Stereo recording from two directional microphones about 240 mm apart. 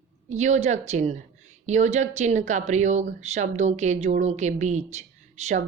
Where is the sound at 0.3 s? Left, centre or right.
Right.